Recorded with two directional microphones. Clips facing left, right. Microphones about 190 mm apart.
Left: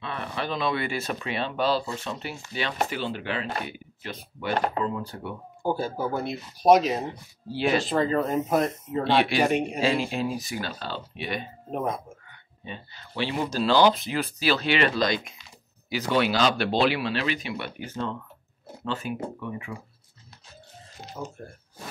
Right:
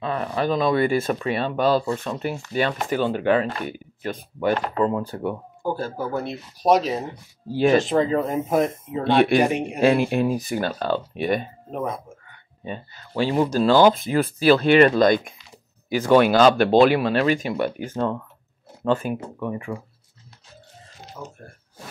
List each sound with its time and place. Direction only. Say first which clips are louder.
0.0 s speech: right 8 dB; 40° right (ahead or behind)
5.8 s speech: right 1 dB; centre (ahead or behind)
7.5 s speech: right 7 dB; 45° right (ahead or behind)
8.0 s speech: right 2 dB; 15° right (ahead or behind)
9.0 s speech: right 5 dB; 50° right (ahead or behind)
11.7 s speech: right 1 dB; centre (ahead or behind)
12.6 s speech: right 7 dB; 45° right (ahead or behind)
21.2 s speech: left 2 dB; 20° left (ahead or behind)